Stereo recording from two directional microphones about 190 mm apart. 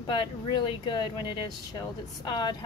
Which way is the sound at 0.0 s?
25° left (ahead or behind).